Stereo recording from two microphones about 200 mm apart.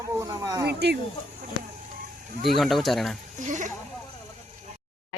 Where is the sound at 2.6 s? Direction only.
Centre (ahead or behind).